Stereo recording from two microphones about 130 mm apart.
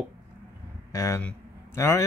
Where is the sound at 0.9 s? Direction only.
25° left (ahead or behind).